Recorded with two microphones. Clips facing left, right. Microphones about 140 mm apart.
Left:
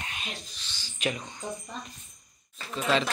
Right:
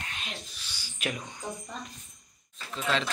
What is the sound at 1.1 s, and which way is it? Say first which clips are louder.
Speech: left 1 dB; 5° right (ahead or behind).